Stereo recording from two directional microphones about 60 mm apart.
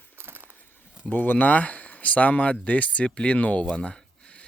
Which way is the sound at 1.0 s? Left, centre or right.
Left.